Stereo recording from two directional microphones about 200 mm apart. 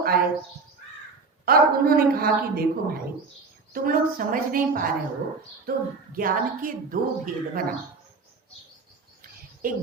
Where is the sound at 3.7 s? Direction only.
45° right (ahead or behind).